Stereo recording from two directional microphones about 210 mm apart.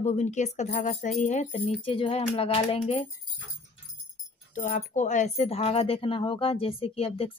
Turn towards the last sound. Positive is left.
turn(degrees=25)  # may be behind; listen again after turning